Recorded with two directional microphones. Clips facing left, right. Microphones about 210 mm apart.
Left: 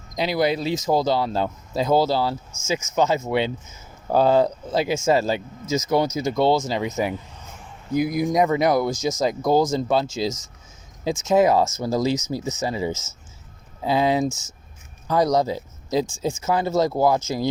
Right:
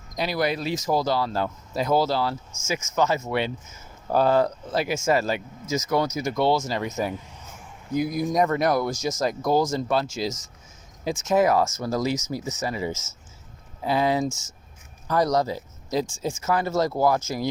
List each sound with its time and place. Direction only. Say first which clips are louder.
0.2 s speech: left 4 dB; 20° left (ahead or behind)
6.8 s speech: left 3 dB; 10° left (ahead or behind); by 17.5 s 25° left (ahead or behind)